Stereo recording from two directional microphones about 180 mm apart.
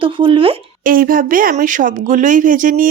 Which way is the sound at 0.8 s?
50° right (ahead or behind).